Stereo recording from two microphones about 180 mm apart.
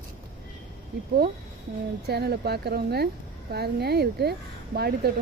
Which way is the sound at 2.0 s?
65° right (ahead or behind).